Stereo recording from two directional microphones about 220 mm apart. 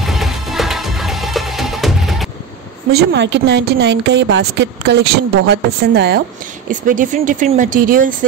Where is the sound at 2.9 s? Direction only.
50° right (ahead or behind).